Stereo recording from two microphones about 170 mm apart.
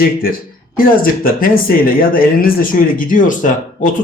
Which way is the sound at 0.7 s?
55° left (ahead or behind).